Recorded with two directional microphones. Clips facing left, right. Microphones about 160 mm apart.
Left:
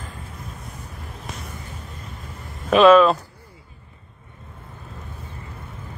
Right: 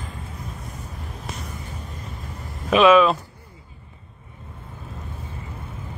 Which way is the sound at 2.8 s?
5° right (ahead or behind).